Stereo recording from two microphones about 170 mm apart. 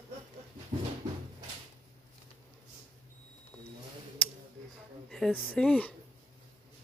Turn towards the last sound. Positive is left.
turn(degrees=5)  # may be behind; listen again after turning